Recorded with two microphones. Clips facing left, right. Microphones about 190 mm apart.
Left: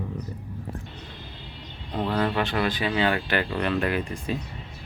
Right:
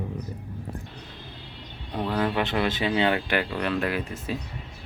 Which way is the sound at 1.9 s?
10° right (ahead or behind).